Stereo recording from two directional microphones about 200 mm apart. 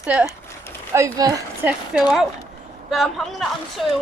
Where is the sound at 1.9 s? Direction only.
Centre (ahead or behind).